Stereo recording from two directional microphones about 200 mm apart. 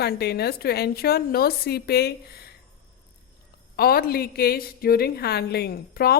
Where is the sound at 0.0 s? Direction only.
55° left (ahead or behind).